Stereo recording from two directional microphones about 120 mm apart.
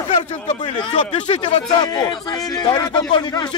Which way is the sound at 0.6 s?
40° left (ahead or behind).